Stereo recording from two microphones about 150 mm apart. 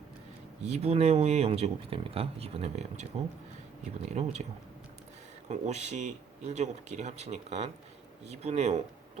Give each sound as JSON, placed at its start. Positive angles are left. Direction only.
{"t": 0.6, "sound": "speech", "side_deg": -45}
{"t": 4.2, "sound": "speech", "side_deg": -45}
{"t": 5.5, "sound": "speech", "side_deg": -50}